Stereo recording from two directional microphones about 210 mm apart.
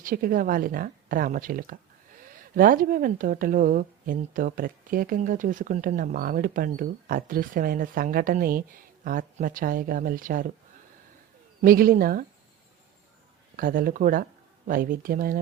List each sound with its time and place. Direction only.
0.0 s speech: 40° right (ahead or behind)
11.6 s speech: 40° right (ahead or behind)
13.6 s speech: 40° right (ahead or behind)